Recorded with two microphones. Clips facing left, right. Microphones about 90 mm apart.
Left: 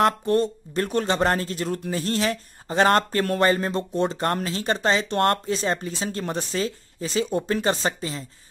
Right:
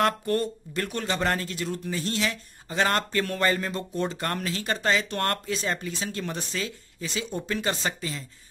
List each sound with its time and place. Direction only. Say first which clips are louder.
0.0 s speech: left 4 dB; 25° left (ahead or behind)